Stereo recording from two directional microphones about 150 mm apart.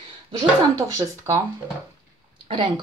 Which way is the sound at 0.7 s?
20° right (ahead or behind).